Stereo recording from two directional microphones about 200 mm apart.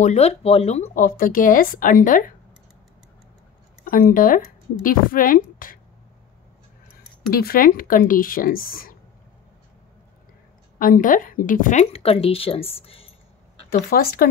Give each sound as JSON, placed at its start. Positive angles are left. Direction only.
{"t": 0.0, "sound": "speech", "side_deg": 35}
{"t": 3.8, "sound": "speech", "side_deg": 45}
{"t": 7.2, "sound": "speech", "side_deg": 50}
{"t": 10.8, "sound": "speech", "side_deg": 40}
{"t": 13.8, "sound": "speech", "side_deg": 50}